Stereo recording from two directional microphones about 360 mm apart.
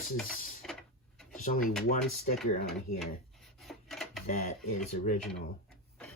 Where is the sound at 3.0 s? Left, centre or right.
Centre.